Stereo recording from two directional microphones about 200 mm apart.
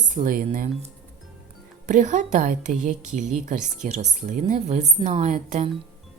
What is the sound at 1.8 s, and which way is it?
A woman's voice, 40° right (ahead or behind).